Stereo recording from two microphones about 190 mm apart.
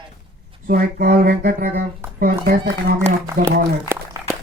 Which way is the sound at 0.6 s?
50° right (ahead or behind).